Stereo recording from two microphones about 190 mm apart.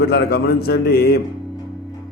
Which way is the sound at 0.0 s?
60° left (ahead or behind).